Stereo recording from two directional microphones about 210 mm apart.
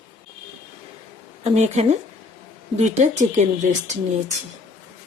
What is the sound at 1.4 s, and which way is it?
Speech, 30° right (ahead or behind).